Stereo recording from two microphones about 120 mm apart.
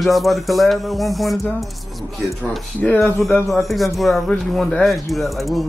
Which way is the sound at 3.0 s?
Centre (ahead or behind).